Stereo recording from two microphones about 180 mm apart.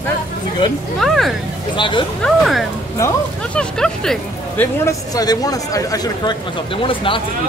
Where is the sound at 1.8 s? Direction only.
25° left (ahead or behind).